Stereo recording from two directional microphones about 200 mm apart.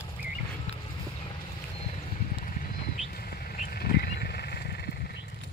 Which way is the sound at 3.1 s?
50° left (ahead or behind).